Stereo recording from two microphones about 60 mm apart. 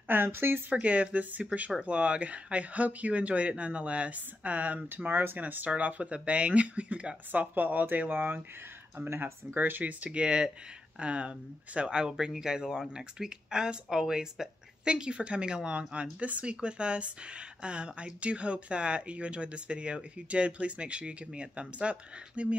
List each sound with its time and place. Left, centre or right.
0.1 s speech: right
0.7 s speech: right
7.5 s speech: right